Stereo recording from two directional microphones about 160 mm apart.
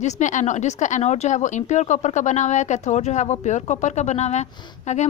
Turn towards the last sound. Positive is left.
turn(degrees=45)  # may be behind; listen again after turning